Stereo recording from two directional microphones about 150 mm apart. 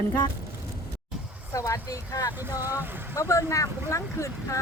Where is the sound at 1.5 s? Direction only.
20° left (ahead or behind).